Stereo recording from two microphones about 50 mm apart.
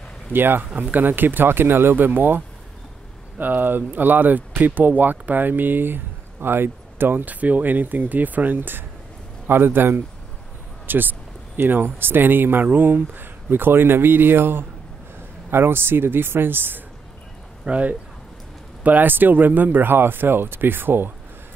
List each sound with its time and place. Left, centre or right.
0.3 s speech: right
17.6 s speech: right
18.9 s speech: right